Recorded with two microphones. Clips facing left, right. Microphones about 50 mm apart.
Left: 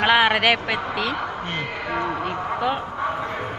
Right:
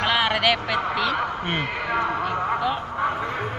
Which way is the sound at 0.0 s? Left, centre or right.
Left.